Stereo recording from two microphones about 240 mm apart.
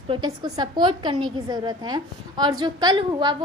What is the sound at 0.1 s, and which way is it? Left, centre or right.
A woman's voice, centre.